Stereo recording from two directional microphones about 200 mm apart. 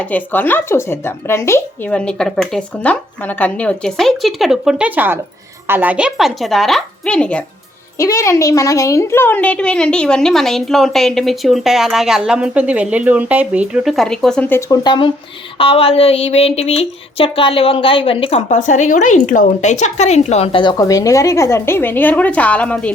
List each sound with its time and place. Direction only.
0.0 s speech: 10° left (ahead or behind)
7.9 s speech: 15° left (ahead or behind)
14.8 s speech: 25° left (ahead or behind); by 22.9 s 5° left (ahead or behind)